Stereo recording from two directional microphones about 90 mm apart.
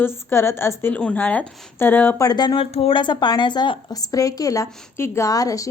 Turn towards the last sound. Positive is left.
turn(degrees=40)  # may be behind; listen again after turning